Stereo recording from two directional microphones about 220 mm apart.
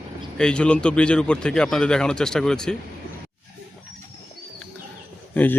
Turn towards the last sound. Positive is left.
turn(degrees=10)  # may be behind; listen again after turning